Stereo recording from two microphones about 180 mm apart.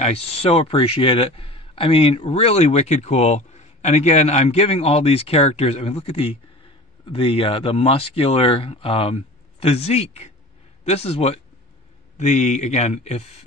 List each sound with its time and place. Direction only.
0.0 s a man's voice: 35° left (ahead or behind)